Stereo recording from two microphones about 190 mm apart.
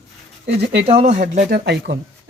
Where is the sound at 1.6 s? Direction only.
60° right (ahead or behind).